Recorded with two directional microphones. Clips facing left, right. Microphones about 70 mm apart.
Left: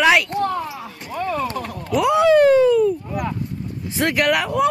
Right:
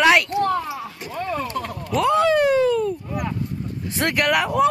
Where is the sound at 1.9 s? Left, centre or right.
Centre.